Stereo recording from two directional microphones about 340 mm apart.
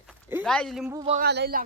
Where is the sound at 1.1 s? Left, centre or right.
Right.